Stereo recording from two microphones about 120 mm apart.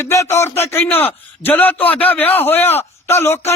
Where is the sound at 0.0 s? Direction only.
25° left (ahead or behind).